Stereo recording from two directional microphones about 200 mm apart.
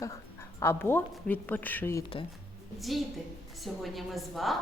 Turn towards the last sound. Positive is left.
turn(degrees=0)  # may be behind; listen again after turning